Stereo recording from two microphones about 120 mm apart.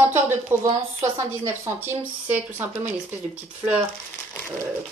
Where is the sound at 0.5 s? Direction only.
20° right (ahead or behind).